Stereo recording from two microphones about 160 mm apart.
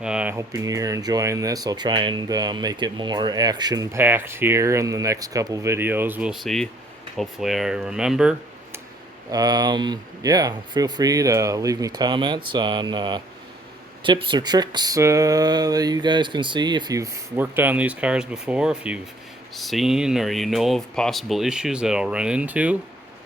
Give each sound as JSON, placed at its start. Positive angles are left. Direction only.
{"t": 0.0, "sound": "speech", "side_deg": -5}
{"t": 9.3, "sound": "speech", "side_deg": -25}